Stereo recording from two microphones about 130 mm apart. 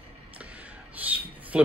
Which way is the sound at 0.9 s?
10° right (ahead or behind).